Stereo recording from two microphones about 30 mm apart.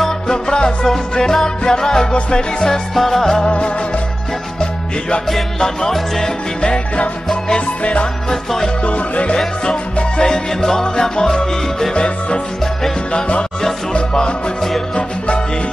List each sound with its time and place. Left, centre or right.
0.3 s music: left
2.9 s music: centre
3.4 s music: left
5.6 s music: centre
7.8 s music: left
8.3 s music: centre
8.8 s music: left
9.7 s music: left
10.2 s music: left